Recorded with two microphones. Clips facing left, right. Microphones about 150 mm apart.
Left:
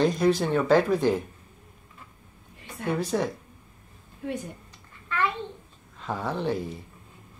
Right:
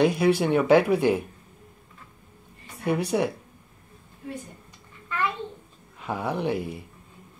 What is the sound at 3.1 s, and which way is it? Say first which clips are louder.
Speech: right 2 dB; 10° right (ahead or behind).